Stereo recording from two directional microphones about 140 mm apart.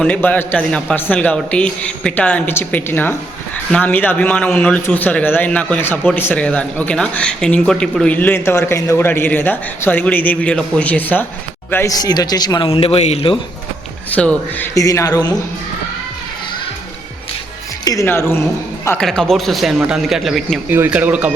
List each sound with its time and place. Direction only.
0.0 s speech: 10° left (ahead or behind); by 12.6 s 30° left (ahead or behind)
12.6 s a man's voice: 40° left (ahead or behind)
14.2 s speech: 10° left (ahead or behind)
14.8 s speech: 25° left (ahead or behind)
18.0 s speech: 15° left (ahead or behind)
18.9 s a man's voice: 5° left (ahead or behind)
20.7 s speech: 15° right (ahead or behind)